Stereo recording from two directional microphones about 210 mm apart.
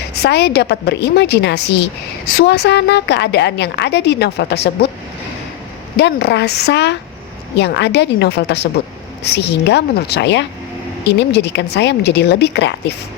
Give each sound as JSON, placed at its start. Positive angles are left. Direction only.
{"t": 0.1, "sound": "a woman's voice", "side_deg": 50}
{"t": 6.0, "sound": "a woman's voice", "side_deg": 50}